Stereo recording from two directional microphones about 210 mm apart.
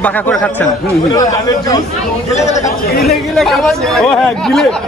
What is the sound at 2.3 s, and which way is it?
Speech, 35° left (ahead or behind).